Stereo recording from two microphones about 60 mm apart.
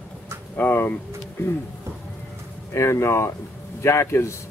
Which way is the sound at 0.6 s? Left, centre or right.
Left.